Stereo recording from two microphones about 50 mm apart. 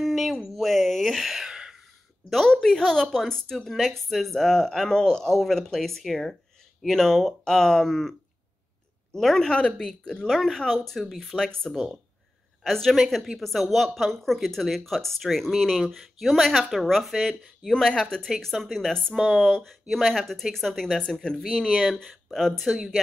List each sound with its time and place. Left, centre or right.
0.0 s a sound: centre
2.2 s a woman's voice: centre
9.6 s a woman's voice: left
11.7 s speech: centre
12.6 s a woman's voice: centre
21.9 s speech: centre